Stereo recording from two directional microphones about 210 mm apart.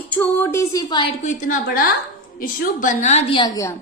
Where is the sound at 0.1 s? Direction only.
10° left (ahead or behind).